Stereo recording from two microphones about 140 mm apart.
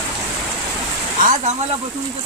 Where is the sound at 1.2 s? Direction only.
65° right (ahead or behind).